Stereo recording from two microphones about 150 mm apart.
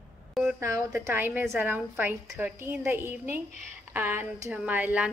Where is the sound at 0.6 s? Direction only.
15° right (ahead or behind).